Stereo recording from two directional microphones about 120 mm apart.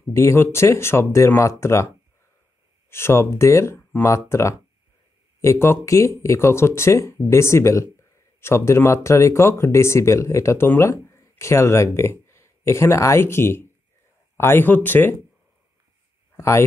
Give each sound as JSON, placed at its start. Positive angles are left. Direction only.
{"t": 0.1, "sound": "speech", "side_deg": 25}
{"t": 2.9, "sound": "speech", "side_deg": 20}
{"t": 16.3, "sound": "speech", "side_deg": 20}